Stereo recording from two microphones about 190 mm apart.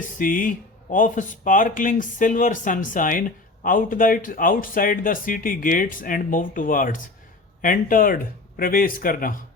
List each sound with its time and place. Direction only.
0.0 s speech: 45° left (ahead or behind)